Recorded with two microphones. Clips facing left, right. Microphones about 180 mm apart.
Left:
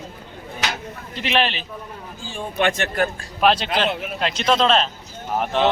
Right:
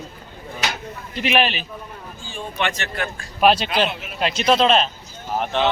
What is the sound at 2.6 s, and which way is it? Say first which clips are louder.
Speech: left 5 dB; 50° left (ahead or behind).